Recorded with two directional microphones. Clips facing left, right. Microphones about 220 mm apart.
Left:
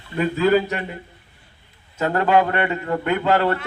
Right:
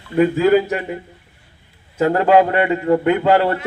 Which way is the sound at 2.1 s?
15° right (ahead or behind).